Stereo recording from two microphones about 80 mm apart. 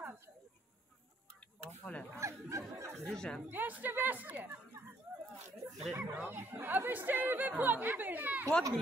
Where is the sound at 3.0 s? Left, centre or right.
Centre.